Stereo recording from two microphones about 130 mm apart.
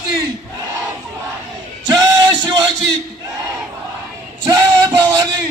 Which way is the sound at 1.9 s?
30° right (ahead or behind).